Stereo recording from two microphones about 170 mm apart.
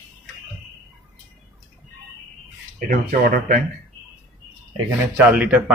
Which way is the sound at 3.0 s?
50° right (ahead or behind).